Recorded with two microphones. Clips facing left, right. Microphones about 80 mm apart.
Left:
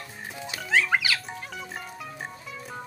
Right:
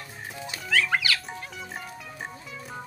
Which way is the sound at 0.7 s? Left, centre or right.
Left.